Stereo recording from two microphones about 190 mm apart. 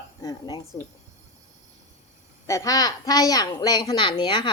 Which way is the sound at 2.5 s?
15° left (ahead or behind).